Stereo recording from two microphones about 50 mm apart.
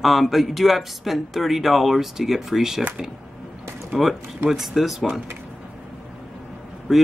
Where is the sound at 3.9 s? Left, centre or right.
Centre.